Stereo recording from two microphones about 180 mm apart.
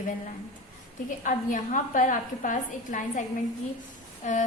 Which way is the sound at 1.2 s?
45° left (ahead or behind).